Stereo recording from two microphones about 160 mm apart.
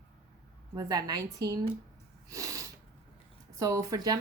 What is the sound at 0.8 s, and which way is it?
Speech, 25° right (ahead or behind).